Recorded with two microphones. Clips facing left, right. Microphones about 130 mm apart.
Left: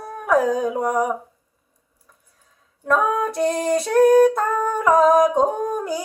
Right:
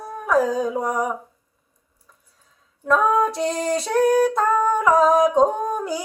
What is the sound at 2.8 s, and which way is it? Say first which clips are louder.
Female singing: right 2 dB; 50° left (ahead or behind).